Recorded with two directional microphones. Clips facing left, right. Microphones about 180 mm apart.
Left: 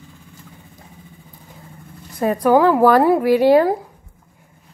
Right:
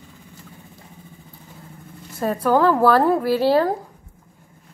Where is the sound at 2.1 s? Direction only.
15° left (ahead or behind).